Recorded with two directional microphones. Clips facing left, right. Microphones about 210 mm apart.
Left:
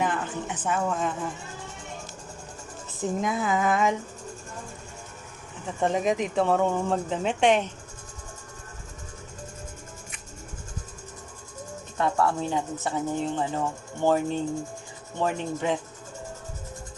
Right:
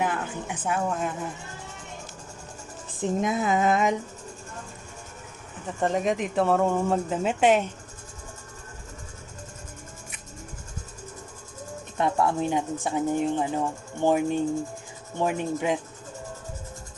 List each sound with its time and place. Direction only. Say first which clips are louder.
0.0 s a woman's voice: even; 10° right (ahead or behind)
3.0 s a sound: right 2 dB; 20° right (ahead or behind)
5.8 s speech: even; centre (ahead or behind)
11.9 s speech: right 1 dB; 20° right (ahead or behind)